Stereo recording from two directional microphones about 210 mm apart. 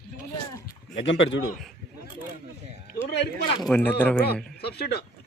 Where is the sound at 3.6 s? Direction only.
10° left (ahead or behind).